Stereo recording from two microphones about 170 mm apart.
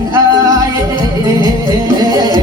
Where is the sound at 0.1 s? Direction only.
20° right (ahead or behind).